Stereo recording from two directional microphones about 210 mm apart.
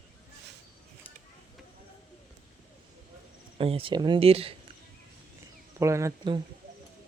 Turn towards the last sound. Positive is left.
turn(degrees=-20)  # may be behind; listen again after turning